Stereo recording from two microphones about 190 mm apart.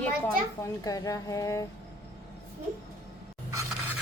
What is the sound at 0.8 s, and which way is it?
Speech, 20° left (ahead or behind).